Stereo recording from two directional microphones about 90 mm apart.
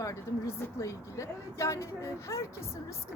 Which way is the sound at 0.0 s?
35° left (ahead or behind).